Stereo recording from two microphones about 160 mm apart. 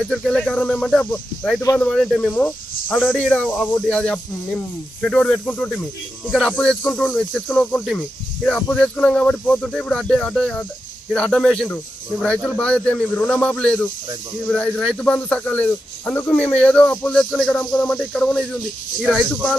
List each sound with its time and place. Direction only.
0.0 s speech: 5° left (ahead or behind)
7.3 s speech: 10° left (ahead or behind)
7.8 s speech: centre (ahead or behind)